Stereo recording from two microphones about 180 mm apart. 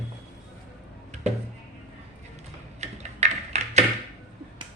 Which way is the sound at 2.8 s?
40° right (ahead or behind).